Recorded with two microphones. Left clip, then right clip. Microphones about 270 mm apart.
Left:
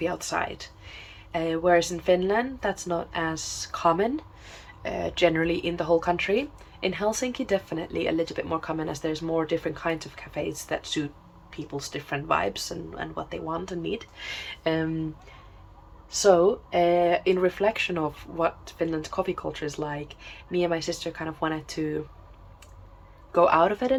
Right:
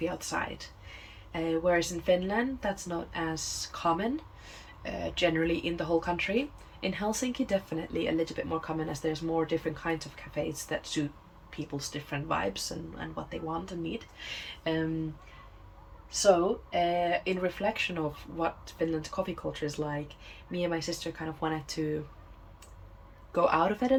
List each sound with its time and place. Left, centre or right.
0.0 s speech: centre
16.9 s speech: centre
23.3 s speech: centre